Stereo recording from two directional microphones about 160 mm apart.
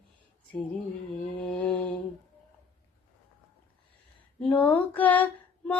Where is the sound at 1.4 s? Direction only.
5° left (ahead or behind).